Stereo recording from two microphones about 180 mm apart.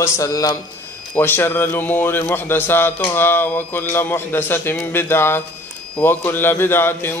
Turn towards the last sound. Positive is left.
turn(degrees=10)  # may be behind; listen again after turning